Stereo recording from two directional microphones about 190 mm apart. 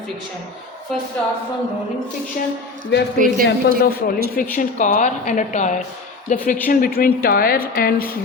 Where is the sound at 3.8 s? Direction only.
50° left (ahead or behind).